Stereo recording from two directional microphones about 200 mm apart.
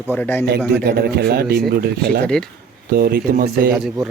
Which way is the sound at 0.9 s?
50° right (ahead or behind).